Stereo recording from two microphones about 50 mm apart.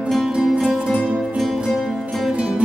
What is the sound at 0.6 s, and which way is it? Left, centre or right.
Music, centre.